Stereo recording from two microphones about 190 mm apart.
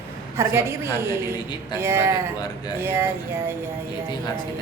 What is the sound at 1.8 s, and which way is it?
A woman's voice, 15° right (ahead or behind).